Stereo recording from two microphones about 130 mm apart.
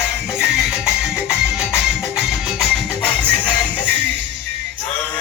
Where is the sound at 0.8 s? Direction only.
5° right (ahead or behind).